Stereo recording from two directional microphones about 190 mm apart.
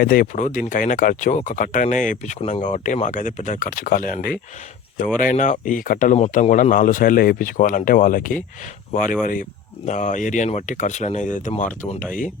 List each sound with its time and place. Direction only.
0.0 s speech: 45° left (ahead or behind)